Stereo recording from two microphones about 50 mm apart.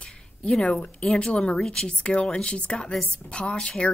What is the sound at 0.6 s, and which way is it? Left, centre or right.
A woman's voice, left.